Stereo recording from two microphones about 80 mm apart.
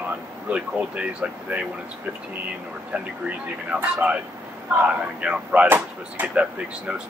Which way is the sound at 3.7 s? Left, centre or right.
Centre.